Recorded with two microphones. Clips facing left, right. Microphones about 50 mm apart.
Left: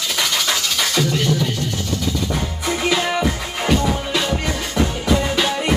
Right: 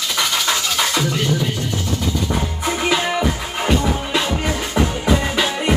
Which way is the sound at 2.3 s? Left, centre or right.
Centre.